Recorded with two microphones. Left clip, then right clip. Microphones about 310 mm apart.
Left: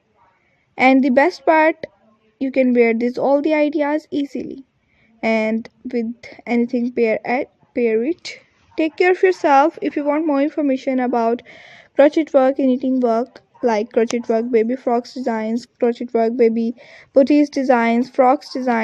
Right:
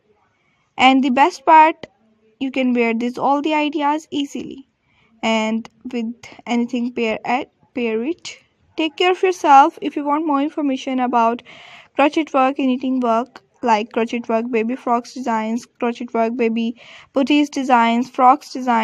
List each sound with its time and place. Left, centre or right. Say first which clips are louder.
0.8 s speech: even; centre